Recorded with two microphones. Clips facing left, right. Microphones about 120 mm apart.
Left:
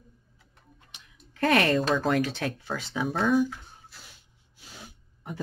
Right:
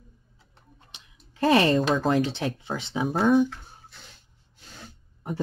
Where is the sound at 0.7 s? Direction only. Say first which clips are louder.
Right 2 dB; 25° right (ahead or behind).